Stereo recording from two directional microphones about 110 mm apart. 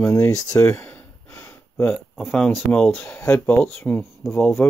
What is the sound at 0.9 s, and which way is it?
Gasp, 20° left (ahead or behind).